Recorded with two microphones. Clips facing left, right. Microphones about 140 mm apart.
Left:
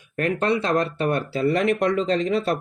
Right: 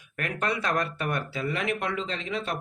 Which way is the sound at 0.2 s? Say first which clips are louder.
Left 8 dB; 30° left (ahead or behind).